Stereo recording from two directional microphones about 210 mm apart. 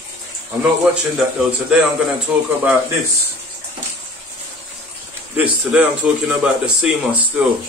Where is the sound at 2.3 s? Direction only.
5° right (ahead or behind).